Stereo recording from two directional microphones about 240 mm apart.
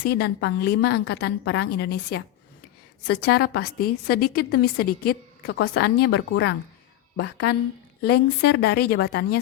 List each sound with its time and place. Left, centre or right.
0.0 s a woman's voice: left